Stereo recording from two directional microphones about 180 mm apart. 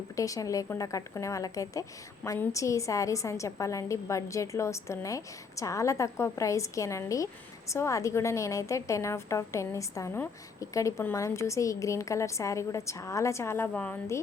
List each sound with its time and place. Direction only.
0.2 s a woman's voice: 20° left (ahead or behind)